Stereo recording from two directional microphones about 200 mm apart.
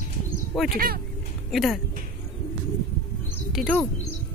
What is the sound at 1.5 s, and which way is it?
Speech, centre (ahead or behind).